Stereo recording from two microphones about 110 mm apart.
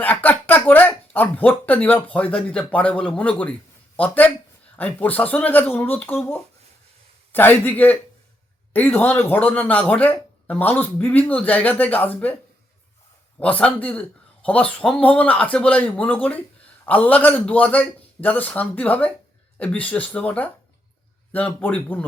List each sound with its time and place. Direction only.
0.0 s speech: 15° left (ahead or behind)
7.3 s speech: 15° left (ahead or behind)
13.4 s speech: 10° left (ahead or behind)